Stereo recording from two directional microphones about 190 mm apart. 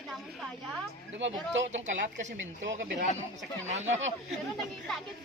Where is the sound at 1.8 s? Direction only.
40° right (ahead or behind).